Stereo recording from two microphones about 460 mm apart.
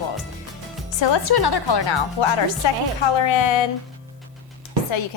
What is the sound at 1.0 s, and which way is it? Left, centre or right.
A woman's voice, left.